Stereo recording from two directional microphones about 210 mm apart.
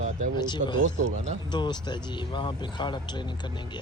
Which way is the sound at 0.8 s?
35° right (ahead or behind).